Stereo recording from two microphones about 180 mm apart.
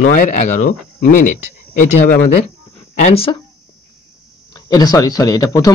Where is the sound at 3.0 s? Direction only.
30° left (ahead or behind).